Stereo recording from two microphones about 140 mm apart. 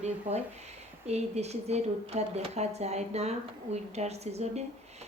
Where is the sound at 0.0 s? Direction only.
55° right (ahead or behind).